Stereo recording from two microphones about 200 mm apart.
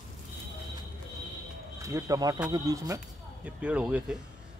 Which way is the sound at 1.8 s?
15° right (ahead or behind).